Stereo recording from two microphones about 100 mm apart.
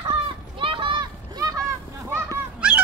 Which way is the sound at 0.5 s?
60° right (ahead or behind).